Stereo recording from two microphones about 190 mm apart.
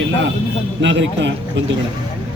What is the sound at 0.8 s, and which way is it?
Speech, 75° right (ahead or behind).